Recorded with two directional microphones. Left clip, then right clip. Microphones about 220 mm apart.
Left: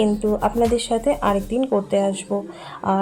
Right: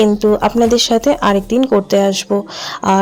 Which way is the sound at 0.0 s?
50° right (ahead or behind).